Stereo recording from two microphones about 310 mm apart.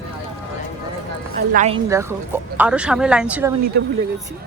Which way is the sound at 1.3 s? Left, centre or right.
Right.